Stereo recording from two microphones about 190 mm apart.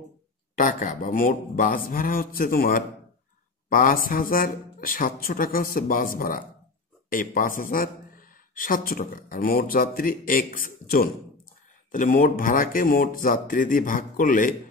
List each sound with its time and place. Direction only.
0.6 s speech: 45° left (ahead or behind)